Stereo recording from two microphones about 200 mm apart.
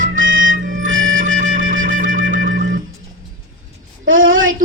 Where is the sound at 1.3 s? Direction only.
40° right (ahead or behind).